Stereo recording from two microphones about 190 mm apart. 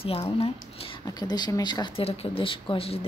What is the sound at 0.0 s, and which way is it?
Speech, 30° left (ahead or behind).